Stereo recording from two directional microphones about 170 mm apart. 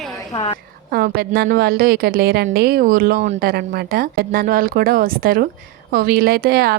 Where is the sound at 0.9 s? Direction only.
65° right (ahead or behind).